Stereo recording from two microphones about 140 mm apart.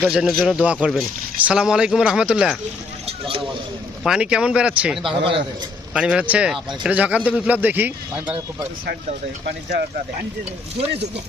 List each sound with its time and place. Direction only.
0.0 s speech: 5° right (ahead or behind)
3.1 s a sound: 40° right (ahead or behind)
4.0 s speech: 5° right (ahead or behind)
5.0 s a man's voice: 40° right (ahead or behind)
5.9 s speech: 5° right (ahead or behind)